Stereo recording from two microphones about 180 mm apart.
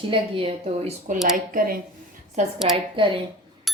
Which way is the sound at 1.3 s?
50° right (ahead or behind).